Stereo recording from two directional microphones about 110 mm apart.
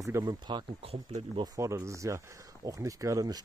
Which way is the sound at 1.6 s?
25° right (ahead or behind).